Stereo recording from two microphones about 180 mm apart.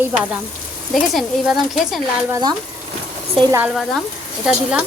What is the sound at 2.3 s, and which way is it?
Speech, 25° right (ahead or behind).